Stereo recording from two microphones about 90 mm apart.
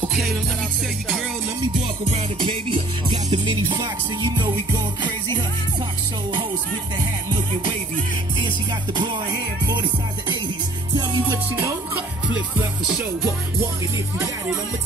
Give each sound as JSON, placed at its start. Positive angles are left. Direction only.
{"t": 0.1, "sound": "music", "side_deg": 0}
{"t": 2.4, "sound": "music", "side_deg": -70}
{"t": 3.8, "sound": "music", "side_deg": -50}
{"t": 7.2, "sound": "music", "side_deg": -60}
{"t": 11.0, "sound": "music", "side_deg": -45}